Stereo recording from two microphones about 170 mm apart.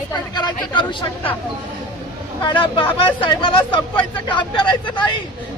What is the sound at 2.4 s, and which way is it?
Speech, 30° left (ahead or behind).